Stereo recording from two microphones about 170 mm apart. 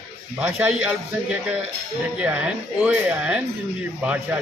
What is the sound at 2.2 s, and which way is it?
A man's voice, 10° right (ahead or behind).